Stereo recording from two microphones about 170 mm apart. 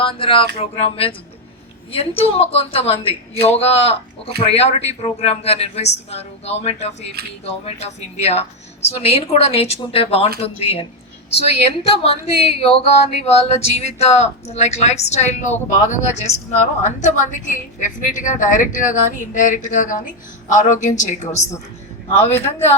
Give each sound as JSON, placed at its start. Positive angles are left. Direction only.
{"t": 0.0, "sound": "speech", "side_deg": 30}